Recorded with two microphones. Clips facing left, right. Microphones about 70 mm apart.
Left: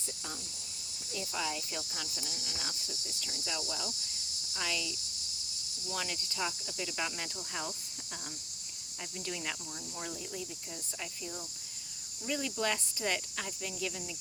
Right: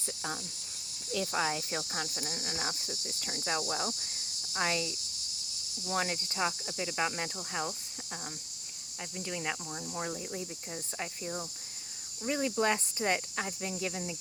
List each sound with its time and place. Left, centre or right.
1.3 s cricket: right
4.5 s speech: right
5.9 s cricket: right
9.1 s speech: centre
9.9 s speech: right
12.2 s cricket: right